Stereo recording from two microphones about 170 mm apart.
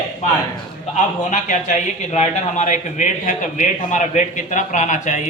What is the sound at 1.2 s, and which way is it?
A man's voice, 45° left (ahead or behind).